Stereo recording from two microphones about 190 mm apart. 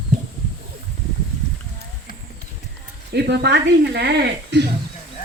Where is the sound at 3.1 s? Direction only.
60° right (ahead or behind).